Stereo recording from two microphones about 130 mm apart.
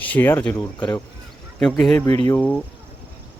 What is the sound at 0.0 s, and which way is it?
Speech, 15° left (ahead or behind).